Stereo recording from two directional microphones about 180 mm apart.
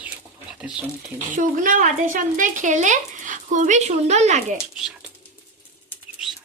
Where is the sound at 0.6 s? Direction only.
5° right (ahead or behind).